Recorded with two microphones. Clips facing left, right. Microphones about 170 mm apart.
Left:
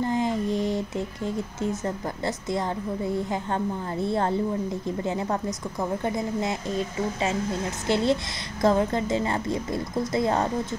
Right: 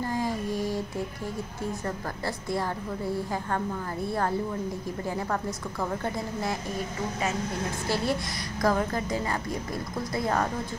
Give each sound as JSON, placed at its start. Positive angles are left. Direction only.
{"t": 0.0, "sound": "a sound", "side_deg": 20}
{"t": 3.1, "sound": "a woman's voice", "side_deg": 20}
{"t": 7.9, "sound": "a woman's voice", "side_deg": 25}